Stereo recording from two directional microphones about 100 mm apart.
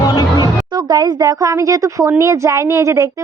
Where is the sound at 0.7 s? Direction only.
45° right (ahead or behind).